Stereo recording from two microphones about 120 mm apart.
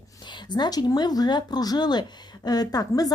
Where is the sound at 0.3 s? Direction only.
40° left (ahead or behind).